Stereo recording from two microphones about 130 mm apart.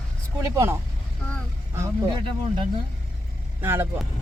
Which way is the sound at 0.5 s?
20° right (ahead or behind).